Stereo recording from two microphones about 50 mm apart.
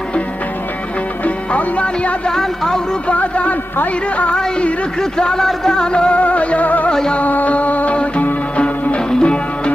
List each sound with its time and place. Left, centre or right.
1.2 s music: left
2.2 s speech: centre
3.1 s a sound: left
4.4 s speech: centre
5.5 s music: centre; by 6.9 s left
6.9 s speech: centre
7.2 s music: left